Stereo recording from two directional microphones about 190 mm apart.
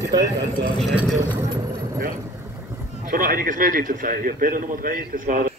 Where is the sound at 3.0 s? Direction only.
50° right (ahead or behind).